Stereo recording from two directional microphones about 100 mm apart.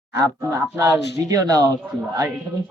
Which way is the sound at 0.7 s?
30° right (ahead or behind).